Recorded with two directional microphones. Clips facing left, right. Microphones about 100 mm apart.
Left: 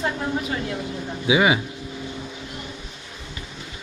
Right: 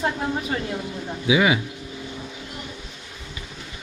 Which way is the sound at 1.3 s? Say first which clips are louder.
Left 1 dB; 25° left (ahead or behind).